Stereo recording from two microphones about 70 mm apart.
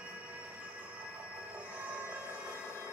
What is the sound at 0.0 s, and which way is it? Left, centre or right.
Train, right.